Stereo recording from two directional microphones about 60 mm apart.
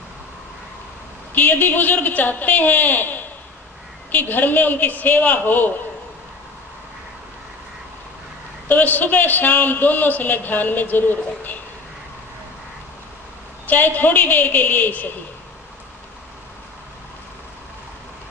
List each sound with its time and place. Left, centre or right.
1.3 s a man's voice: left
8.6 s a man's voice: left
13.7 s a man's voice: left